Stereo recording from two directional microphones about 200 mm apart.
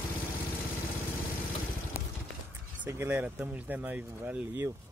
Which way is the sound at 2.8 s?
15° right (ahead or behind).